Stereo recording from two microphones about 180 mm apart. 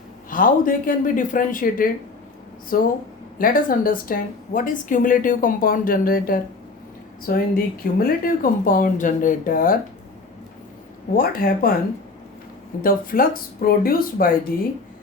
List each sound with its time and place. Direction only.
0.3 s a woman's voice: 50° left (ahead or behind)
11.1 s a woman's voice: 55° left (ahead or behind)
12.8 s a woman's voice: 50° left (ahead or behind)